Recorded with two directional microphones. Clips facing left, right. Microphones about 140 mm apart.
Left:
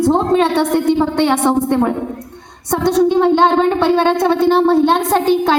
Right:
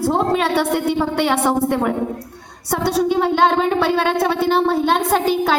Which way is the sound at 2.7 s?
10° right (ahead or behind).